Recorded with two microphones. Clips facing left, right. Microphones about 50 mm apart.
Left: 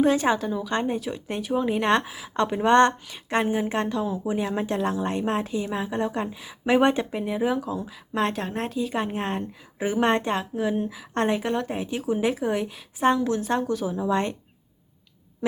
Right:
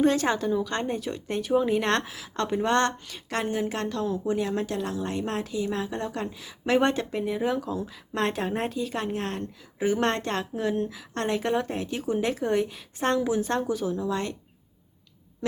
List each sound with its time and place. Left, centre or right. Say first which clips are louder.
0.0 s a woman's voice: left 2 dB; centre; by 5.6 s left
5.6 s a woman's voice: left 3 dB; centre
11.1 s a woman's voice: left 5 dB; left
11.3 s a woman's voice: even; centre
13.1 s a woman's voice: left 1 dB; centre
13.9 s a woman's voice: left 4 dB; left